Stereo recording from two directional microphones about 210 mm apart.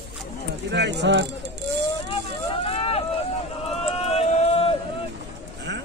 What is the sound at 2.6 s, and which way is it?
Vehicle, 25° left (ahead or behind).